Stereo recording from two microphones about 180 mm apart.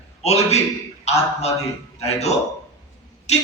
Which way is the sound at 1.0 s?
35° left (ahead or behind).